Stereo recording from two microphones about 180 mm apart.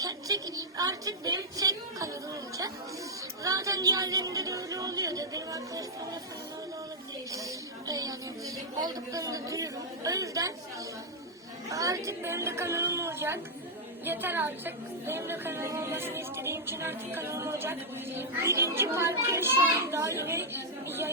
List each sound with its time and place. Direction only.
0.0 s a sound: 20° right (ahead or behind)
3.4 s speech: 20° right (ahead or behind)
7.3 s a woman's voice: 20° right (ahead or behind)
11.7 s a woman's voice: 20° right (ahead or behind)